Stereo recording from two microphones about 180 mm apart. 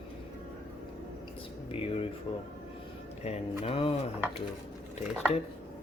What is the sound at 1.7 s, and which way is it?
Speech, 35° left (ahead or behind).